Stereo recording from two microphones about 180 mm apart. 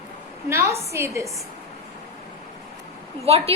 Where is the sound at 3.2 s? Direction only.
35° right (ahead or behind).